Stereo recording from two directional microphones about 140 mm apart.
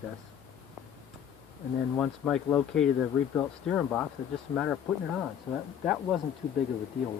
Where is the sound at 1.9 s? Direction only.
5° left (ahead or behind).